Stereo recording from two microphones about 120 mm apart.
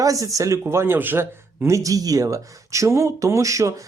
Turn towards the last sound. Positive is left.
turn(degrees=-25)  # may be behind; listen again after turning